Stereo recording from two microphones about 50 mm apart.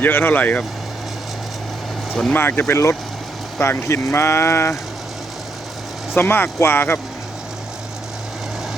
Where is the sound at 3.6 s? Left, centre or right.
Left.